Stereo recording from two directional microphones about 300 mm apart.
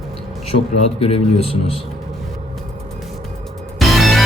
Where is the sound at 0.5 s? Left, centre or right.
Left.